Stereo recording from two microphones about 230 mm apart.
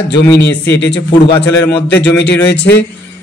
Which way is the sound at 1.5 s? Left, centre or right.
Centre.